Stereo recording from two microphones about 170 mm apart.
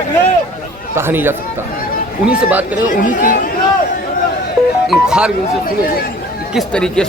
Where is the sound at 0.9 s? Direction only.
15° right (ahead or behind).